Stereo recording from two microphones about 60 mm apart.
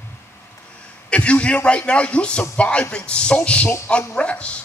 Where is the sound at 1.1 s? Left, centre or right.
Centre.